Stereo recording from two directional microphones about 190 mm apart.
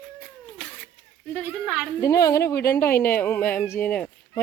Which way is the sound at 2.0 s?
15° left (ahead or behind).